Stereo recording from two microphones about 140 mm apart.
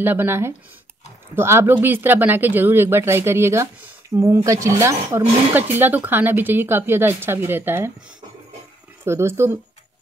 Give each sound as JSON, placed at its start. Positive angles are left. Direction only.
{"t": 0.0, "sound": "speech", "side_deg": -15}
{"t": 9.0, "sound": "speech", "side_deg": -20}